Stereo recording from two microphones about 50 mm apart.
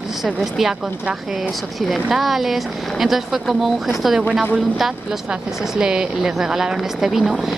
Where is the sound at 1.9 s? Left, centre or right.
Centre.